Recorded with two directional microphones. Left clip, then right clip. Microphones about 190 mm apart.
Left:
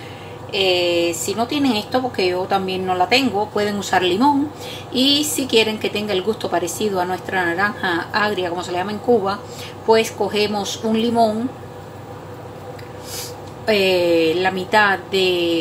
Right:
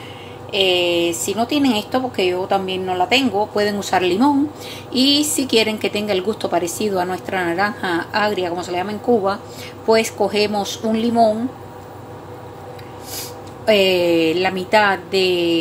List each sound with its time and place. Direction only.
0.5 s a woman's voice: 25° right (ahead or behind)
13.7 s a woman's voice: 20° right (ahead or behind)